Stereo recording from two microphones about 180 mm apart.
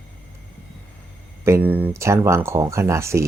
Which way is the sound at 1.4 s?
10° right (ahead or behind).